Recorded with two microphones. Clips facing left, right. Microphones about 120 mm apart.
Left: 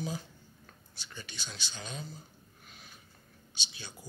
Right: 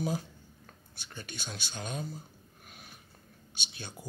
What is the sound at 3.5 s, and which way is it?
Speech, 55° right (ahead or behind).